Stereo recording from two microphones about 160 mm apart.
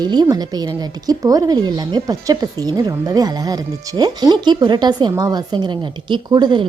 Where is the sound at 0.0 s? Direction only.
25° right (ahead or behind).